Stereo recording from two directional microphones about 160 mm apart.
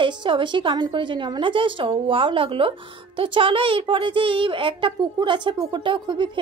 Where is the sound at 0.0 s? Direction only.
30° right (ahead or behind).